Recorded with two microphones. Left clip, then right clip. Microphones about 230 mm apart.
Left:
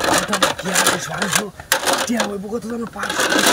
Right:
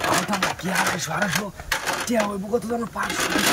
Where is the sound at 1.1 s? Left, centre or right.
Left.